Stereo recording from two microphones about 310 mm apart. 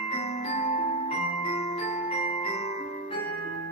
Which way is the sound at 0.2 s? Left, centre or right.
Centre.